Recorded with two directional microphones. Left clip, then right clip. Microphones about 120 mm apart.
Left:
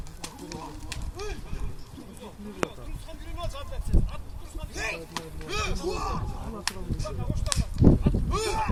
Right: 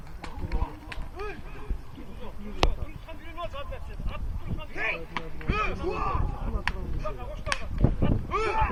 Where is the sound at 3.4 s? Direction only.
50° left (ahead or behind).